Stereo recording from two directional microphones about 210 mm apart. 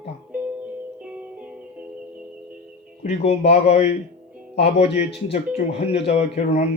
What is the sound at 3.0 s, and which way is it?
Speech, 30° left (ahead or behind).